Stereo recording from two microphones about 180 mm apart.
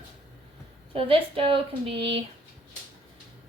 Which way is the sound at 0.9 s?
30° right (ahead or behind).